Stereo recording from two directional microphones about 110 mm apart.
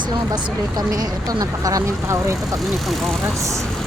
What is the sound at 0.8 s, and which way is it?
Speech, 35° right (ahead or behind).